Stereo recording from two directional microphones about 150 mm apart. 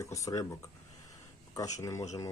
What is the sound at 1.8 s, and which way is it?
Speech, 20° left (ahead or behind).